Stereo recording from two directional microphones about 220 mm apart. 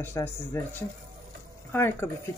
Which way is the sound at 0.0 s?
10° left (ahead or behind).